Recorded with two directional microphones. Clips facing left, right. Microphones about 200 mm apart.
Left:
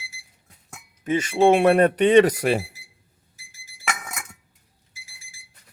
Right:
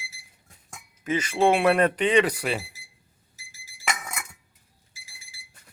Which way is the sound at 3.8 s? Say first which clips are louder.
Even; 5° left (ahead or behind).